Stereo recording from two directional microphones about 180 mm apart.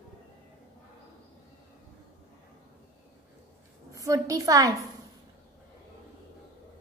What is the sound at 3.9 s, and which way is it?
Speech, 20° right (ahead or behind).